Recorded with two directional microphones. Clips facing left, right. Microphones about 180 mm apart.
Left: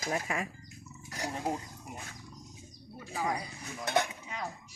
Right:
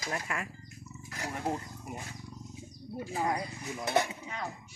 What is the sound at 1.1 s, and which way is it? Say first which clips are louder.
Roaring cats: left 2 dB; 35° left (ahead or behind).